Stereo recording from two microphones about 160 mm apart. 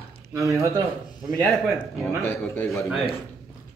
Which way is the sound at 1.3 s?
5° left (ahead or behind).